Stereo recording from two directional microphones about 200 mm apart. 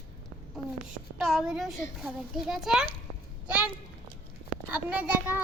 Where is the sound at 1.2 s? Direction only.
Centre (ahead or behind).